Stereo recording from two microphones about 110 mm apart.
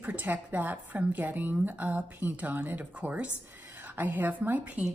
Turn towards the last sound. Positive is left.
turn(degrees=-15)  # may be behind; listen again after turning